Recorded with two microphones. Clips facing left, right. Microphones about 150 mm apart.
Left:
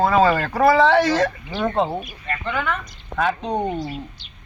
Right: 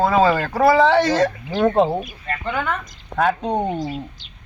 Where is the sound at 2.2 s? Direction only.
40° right (ahead or behind).